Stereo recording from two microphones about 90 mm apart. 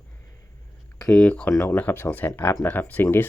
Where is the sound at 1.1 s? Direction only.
10° left (ahead or behind).